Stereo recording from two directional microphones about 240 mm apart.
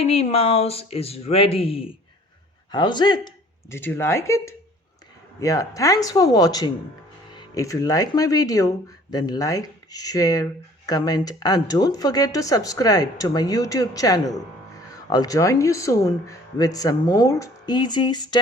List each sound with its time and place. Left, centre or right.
0.0 s speech: left